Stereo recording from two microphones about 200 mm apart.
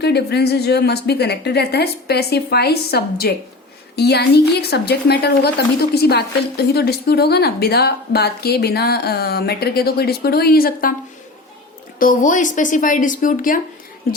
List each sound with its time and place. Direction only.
0.0 s a woman's voice: 55° left (ahead or behind)
11.9 s a woman's voice: 40° left (ahead or behind)